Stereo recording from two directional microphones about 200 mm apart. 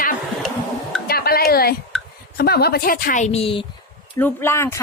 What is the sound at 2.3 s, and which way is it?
Speech, 50° left (ahead or behind).